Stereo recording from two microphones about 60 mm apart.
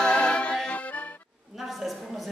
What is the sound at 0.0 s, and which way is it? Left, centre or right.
Music, centre.